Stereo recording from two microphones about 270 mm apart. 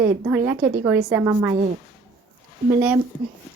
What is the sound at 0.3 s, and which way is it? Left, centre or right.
A woman's voice, centre.